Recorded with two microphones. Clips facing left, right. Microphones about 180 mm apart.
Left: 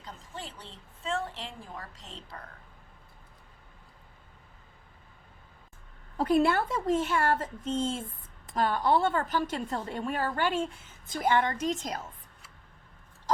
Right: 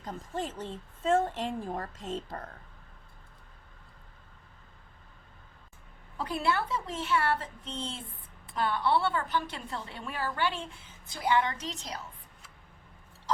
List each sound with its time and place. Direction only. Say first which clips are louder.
0.0 s a woman's voice: right 7 dB; 45° right (ahead or behind)
6.1 s a woman's voice: left 6 dB; 45° left (ahead or behind)